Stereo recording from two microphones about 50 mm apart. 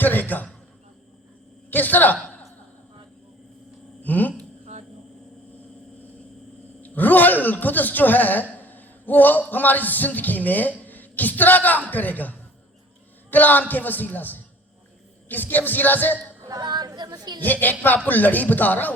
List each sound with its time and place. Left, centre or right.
0.0 s a man's voice: left
1.7 s speech: left
4.0 s speech: left
6.8 s a sound: left
9.5 s speech: left
17.4 s speech: left